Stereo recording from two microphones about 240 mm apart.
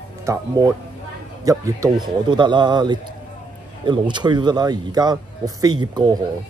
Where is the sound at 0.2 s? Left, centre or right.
Centre.